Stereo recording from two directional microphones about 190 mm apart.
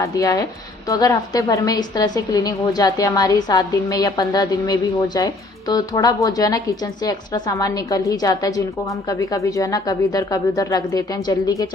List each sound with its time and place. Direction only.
0.0 s a woman's voice: 15° left (ahead or behind)